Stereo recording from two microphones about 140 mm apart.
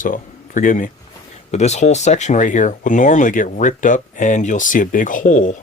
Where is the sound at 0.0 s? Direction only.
70° left (ahead or behind).